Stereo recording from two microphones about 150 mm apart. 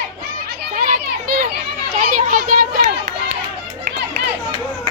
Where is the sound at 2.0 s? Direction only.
65° right (ahead or behind).